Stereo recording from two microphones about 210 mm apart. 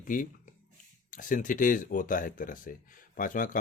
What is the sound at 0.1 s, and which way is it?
Speech, 40° left (ahead or behind).